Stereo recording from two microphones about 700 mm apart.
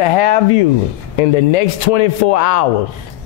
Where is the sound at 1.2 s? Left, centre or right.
Left.